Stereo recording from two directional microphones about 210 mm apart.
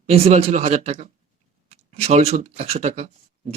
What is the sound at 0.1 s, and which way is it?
Speech, 30° right (ahead or behind).